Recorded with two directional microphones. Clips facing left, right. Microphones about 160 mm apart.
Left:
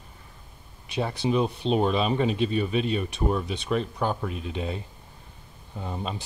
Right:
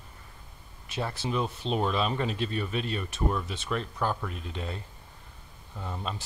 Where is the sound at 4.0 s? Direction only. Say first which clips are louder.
Left 3 dB; 20° left (ahead or behind).